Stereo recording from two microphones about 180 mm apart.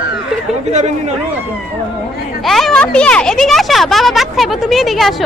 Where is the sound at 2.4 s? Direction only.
Centre (ahead or behind).